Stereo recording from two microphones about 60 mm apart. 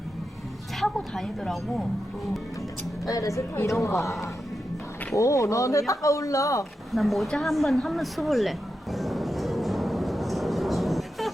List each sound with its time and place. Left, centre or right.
0.9 s speech: centre
3.1 s speech: left
5.1 s speech: left
6.9 s a sound: centre